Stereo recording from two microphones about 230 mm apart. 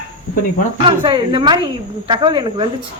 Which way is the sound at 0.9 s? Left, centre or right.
Centre.